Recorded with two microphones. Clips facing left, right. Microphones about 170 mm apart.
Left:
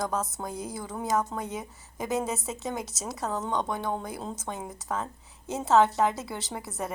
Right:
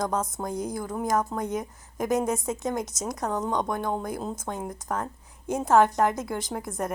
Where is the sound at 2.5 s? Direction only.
15° right (ahead or behind).